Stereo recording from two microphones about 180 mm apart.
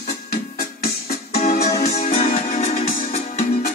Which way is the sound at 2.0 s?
50° left (ahead or behind).